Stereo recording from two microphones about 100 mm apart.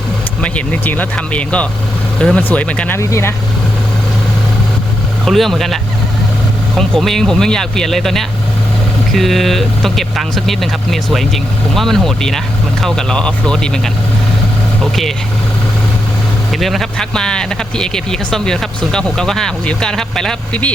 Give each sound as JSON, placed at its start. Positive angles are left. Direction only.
{"t": 0.4, "sound": "speech", "side_deg": 15}
{"t": 3.0, "sound": "speech", "side_deg": 30}
{"t": 5.2, "sound": "speech", "side_deg": 0}
{"t": 16.5, "sound": "speech", "side_deg": 0}